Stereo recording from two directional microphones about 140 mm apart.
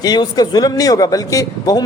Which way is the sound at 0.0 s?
30° left (ahead or behind).